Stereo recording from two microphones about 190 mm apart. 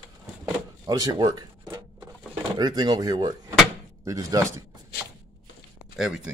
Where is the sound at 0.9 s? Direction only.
20° right (ahead or behind).